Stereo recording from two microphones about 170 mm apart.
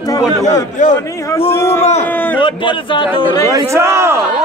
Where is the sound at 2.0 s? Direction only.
10° left (ahead or behind).